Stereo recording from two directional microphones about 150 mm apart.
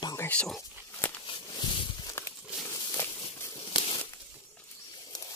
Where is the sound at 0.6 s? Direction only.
15° left (ahead or behind).